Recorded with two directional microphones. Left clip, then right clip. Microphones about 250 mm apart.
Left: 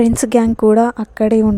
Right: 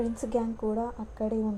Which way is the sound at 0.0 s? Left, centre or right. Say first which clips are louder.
Left 16 dB; left.